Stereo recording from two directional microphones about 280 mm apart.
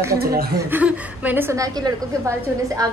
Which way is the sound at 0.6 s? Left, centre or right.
Centre.